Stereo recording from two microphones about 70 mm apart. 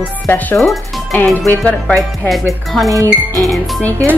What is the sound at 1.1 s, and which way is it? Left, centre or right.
Speech, left.